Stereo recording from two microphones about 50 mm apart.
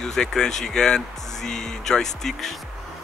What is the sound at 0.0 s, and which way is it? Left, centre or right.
Speech, centre.